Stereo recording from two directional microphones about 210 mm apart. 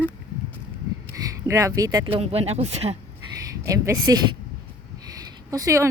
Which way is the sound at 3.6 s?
15° right (ahead or behind).